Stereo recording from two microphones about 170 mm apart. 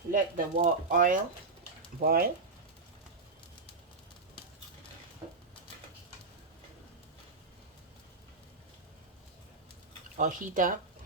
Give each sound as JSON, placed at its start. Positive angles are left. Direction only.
{"t": 0.1, "sound": "speech", "side_deg": -50}
{"t": 2.0, "sound": "speech", "side_deg": -60}
{"t": 10.2, "sound": "speech", "side_deg": -50}